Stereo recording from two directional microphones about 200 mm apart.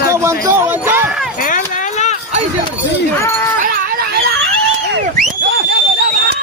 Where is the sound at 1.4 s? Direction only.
40° left (ahead or behind).